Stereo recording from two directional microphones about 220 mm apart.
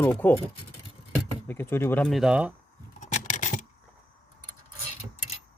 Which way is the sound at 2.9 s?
35° left (ahead or behind).